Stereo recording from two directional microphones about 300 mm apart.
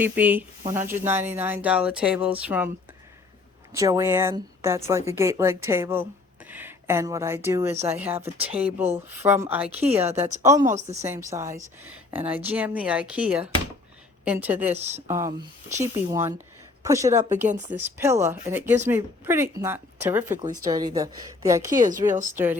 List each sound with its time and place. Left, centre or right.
0.0 s speech: centre
3.7 s speech: centre
10.1 s a woman's voice: right
10.4 s speech: centre
10.7 s a woman's voice: right
11.0 s speech: centre
14.7 s a woman's voice: right
15.0 s speech: centre
21.8 s a woman's voice: right